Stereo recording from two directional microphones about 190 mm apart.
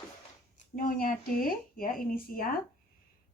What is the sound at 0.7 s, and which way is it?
Speech, 45° left (ahead or behind).